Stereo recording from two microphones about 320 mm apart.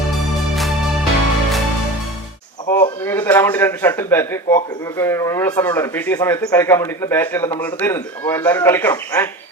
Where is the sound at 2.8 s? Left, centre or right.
Centre.